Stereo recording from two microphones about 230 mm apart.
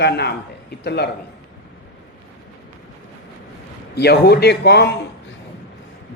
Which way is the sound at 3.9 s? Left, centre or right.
Left.